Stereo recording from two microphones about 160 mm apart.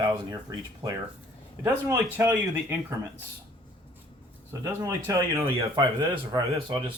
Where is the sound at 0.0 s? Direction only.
25° right (ahead or behind).